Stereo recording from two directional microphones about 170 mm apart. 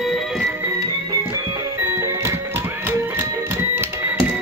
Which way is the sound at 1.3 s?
15° right (ahead or behind).